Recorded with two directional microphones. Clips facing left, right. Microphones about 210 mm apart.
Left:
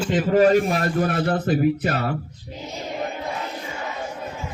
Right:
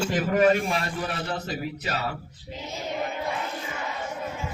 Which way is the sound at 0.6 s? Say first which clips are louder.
Left 7 dB; 50° left (ahead or behind).